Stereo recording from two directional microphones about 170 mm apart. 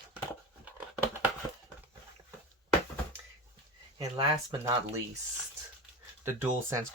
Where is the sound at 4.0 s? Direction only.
25° right (ahead or behind).